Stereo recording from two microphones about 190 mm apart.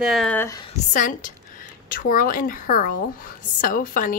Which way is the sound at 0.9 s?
45° left (ahead or behind).